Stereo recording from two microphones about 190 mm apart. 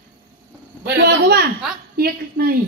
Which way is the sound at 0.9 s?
60° right (ahead or behind).